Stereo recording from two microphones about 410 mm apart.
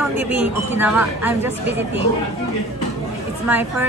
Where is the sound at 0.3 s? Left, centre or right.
Centre.